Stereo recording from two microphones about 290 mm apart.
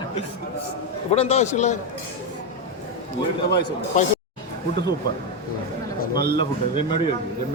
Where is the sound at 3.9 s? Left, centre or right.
Left.